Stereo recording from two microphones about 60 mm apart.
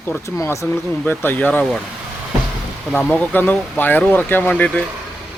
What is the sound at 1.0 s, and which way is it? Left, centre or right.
Speech, left.